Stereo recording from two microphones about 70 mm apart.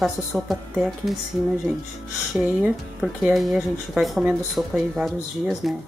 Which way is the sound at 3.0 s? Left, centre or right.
Centre.